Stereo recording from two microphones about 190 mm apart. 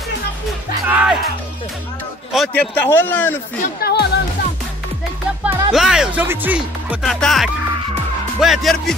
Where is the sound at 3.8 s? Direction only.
60° left (ahead or behind).